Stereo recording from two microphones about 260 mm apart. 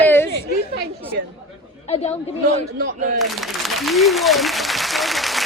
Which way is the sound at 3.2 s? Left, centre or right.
Centre.